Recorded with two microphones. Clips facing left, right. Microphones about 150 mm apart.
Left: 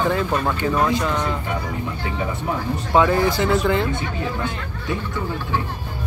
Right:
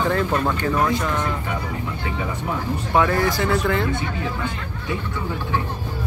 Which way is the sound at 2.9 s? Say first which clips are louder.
Left 2 dB; 20° left (ahead or behind).